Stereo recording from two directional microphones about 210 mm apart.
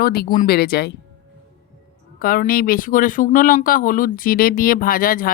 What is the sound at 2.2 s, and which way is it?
Speech, 40° left (ahead or behind).